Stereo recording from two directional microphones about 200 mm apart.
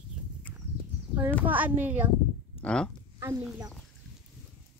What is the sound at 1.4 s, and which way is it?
Speech, 10° right (ahead or behind).